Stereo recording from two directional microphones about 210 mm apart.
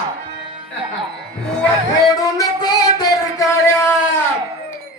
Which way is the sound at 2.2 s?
20° left (ahead or behind).